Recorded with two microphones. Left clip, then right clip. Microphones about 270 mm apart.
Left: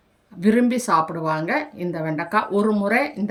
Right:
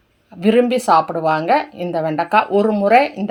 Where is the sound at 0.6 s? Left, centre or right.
Centre.